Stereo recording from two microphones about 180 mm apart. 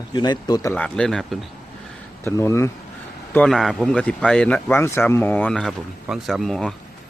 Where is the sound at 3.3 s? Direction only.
5° left (ahead or behind).